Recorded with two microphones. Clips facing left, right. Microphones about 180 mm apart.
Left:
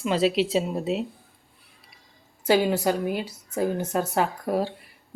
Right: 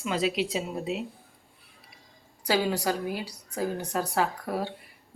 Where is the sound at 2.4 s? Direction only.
20° left (ahead or behind).